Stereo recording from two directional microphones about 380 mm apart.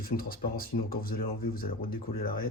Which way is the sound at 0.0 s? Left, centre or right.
Left.